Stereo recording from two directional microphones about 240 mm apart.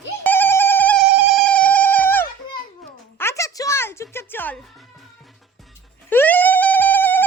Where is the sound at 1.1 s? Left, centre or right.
Centre.